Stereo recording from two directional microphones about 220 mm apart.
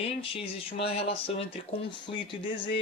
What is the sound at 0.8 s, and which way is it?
Speech, 25° left (ahead or behind).